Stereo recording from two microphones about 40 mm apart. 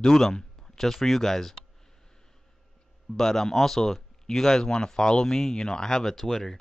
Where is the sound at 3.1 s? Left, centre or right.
Centre.